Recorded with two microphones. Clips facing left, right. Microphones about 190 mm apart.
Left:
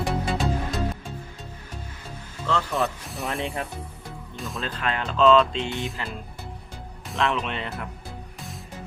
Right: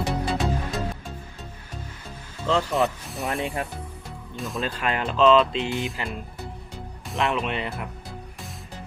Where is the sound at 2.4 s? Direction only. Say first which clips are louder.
Right 3 dB; 20° right (ahead or behind).